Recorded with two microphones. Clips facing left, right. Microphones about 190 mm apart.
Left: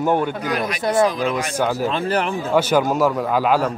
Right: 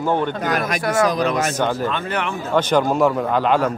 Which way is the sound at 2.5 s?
5° left (ahead or behind).